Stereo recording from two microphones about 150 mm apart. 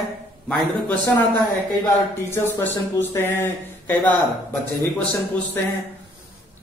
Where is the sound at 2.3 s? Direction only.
15° left (ahead or behind).